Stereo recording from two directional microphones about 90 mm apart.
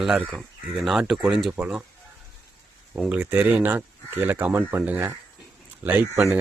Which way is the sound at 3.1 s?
20° right (ahead or behind).